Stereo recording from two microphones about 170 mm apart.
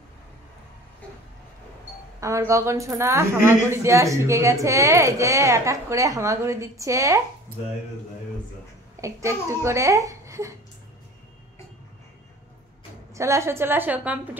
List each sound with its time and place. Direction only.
2.1 s a woman's voice: 20° right (ahead or behind)
9.0 s a woman's voice: 15° right (ahead or behind)
13.1 s a woman's voice: 15° right (ahead or behind)